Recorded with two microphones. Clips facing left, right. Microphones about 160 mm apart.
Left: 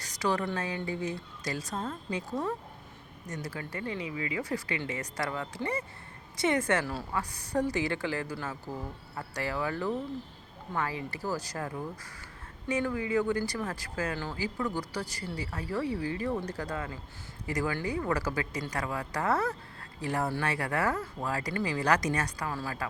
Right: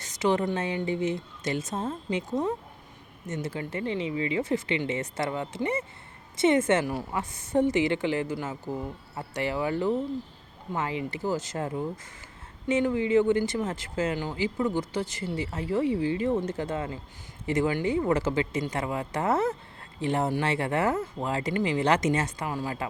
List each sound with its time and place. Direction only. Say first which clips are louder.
0.0 s speech: right 5 dB; 25° right (ahead or behind)